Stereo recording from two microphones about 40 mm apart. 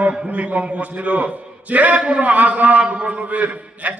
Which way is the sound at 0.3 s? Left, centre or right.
Right.